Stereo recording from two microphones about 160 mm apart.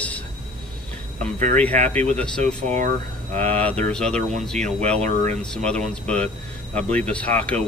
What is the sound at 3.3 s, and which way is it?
Speech, 40° right (ahead or behind).